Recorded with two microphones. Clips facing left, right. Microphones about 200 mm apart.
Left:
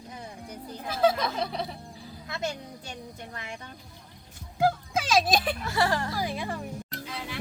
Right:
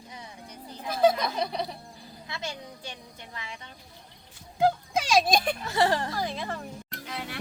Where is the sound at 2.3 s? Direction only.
45° left (ahead or behind).